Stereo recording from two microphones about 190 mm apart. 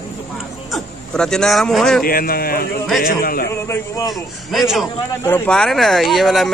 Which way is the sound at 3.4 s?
15° left (ahead or behind).